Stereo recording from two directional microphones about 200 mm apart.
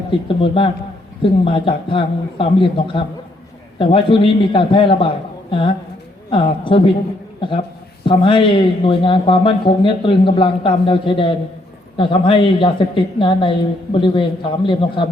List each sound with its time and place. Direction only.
0.1 s speech: 25° left (ahead or behind)
8.0 s speech: 25° left (ahead or behind)